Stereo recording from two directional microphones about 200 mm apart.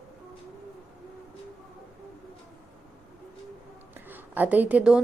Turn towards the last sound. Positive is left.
turn(degrees=-5)  # may be behind; listen again after turning